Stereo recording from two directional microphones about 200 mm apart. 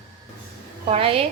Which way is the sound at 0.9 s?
30° right (ahead or behind).